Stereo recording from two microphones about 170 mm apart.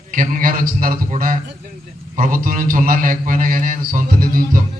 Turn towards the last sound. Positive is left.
turn(degrees=-55)  # may be behind; listen again after turning